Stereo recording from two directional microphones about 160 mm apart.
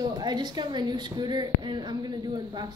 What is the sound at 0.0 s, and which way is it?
A woman's voice, 25° right (ahead or behind).